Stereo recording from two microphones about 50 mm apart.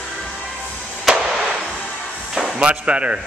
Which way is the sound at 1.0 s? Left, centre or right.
Centre.